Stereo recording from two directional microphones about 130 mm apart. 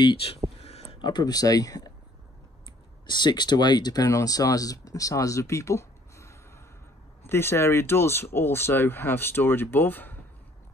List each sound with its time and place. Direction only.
0.0 s speech: 40° left (ahead or behind)
0.6 s a sound: 50° left (ahead or behind)
1.0 s speech: 30° left (ahead or behind)
3.1 s speech: 35° left (ahead or behind); by 10.2 s 15° left (ahead or behind)